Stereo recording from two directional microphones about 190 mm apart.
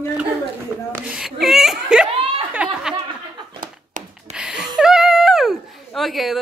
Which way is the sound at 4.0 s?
40° right (ahead or behind).